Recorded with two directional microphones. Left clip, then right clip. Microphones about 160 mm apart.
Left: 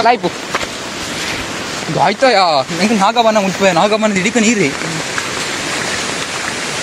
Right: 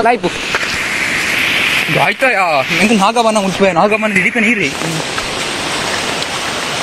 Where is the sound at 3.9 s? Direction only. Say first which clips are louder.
Right 1 dB; centre (ahead or behind).